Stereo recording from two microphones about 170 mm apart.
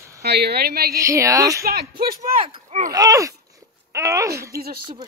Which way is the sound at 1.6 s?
65° right (ahead or behind).